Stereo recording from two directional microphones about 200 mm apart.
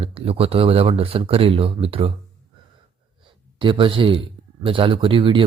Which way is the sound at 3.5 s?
25° right (ahead or behind).